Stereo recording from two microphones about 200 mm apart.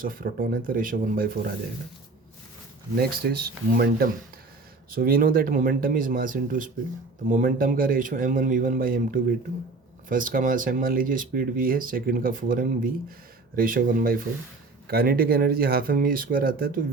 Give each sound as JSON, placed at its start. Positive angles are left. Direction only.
{"t": 0.0, "sound": "speech", "side_deg": -45}
{"t": 3.0, "sound": "speech", "side_deg": -50}